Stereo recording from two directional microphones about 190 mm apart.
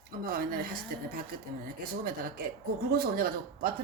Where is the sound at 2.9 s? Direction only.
55° right (ahead or behind).